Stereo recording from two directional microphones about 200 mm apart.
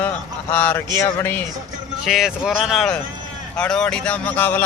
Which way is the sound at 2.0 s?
Centre (ahead or behind).